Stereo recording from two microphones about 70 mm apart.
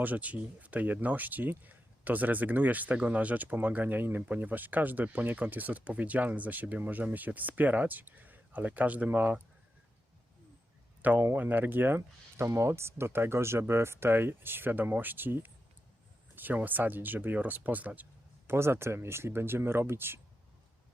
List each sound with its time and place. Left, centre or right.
0.0 s speech: right
11.0 s speech: right
18.4 s speech: right